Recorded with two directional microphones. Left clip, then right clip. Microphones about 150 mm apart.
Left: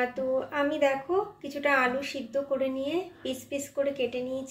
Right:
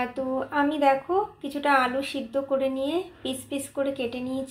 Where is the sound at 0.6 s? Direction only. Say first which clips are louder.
Right 6 dB; 35° right (ahead or behind).